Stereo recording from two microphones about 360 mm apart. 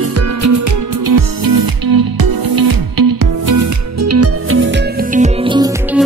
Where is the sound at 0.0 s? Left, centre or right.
Right; by 5.7 s centre.